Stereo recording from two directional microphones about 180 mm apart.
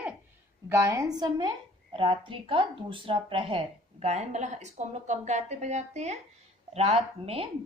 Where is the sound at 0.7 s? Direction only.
15° right (ahead or behind).